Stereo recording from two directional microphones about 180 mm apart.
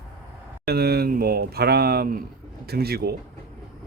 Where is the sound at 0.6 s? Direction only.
60° right (ahead or behind).